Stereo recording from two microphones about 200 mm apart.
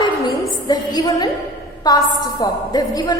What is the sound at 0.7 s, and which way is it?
A woman's voice, 20° left (ahead or behind).